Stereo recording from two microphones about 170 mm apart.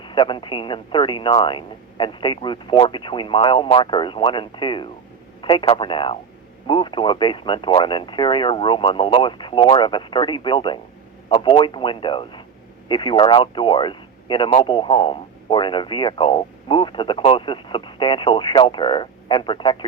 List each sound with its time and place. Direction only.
0.0 s speech: 30° left (ahead or behind)